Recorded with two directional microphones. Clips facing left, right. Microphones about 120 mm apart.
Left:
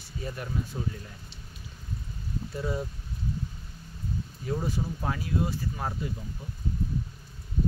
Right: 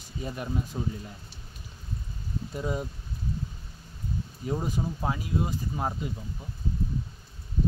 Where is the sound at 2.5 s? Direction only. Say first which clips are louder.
Right 1 dB; 20° right (ahead or behind).